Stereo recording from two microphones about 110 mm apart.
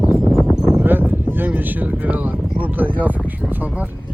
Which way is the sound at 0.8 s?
15° right (ahead or behind).